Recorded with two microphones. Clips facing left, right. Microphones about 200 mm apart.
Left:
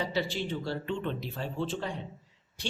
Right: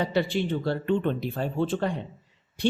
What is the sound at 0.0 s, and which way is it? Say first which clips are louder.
Speech: right 6 dB; 55° right (ahead or behind).